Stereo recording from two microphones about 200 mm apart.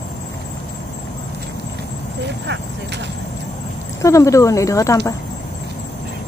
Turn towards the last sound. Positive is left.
turn(degrees=15)  # may be behind; listen again after turning